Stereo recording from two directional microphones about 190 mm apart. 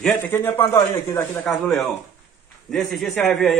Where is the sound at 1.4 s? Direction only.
Centre (ahead or behind).